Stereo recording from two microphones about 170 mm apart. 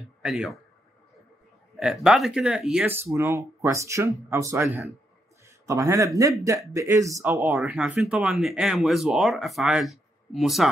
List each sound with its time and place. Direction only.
0.2 s speech: centre (ahead or behind)
1.8 s speech: centre (ahead or behind)
5.7 s speech: 20° right (ahead or behind); by 10.7 s centre (ahead or behind)